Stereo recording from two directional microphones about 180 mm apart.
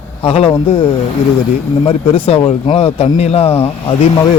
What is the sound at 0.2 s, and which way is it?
Speech, 30° left (ahead or behind).